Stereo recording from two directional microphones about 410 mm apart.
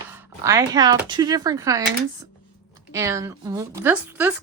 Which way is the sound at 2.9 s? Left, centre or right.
Centre.